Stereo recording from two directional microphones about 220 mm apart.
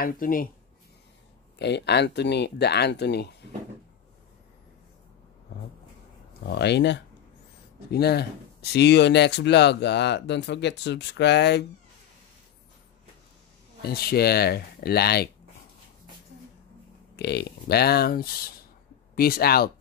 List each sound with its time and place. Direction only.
0.0 s speech: 40° left (ahead or behind)
1.6 s speech: 50° left (ahead or behind)
6.4 s speech: 50° left (ahead or behind)
13.8 s speech: 45° left (ahead or behind)
17.1 s speech: 50° left (ahead or behind)